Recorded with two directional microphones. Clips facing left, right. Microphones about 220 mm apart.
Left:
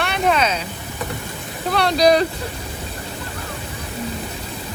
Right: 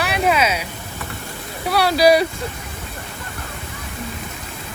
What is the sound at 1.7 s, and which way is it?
Speech, 5° right (ahead or behind).